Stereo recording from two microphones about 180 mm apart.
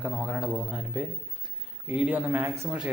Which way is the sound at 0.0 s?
5° right (ahead or behind).